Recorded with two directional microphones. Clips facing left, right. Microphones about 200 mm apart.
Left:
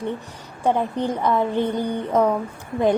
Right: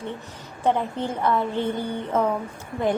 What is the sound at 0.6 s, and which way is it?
A woman's voice, 15° left (ahead or behind).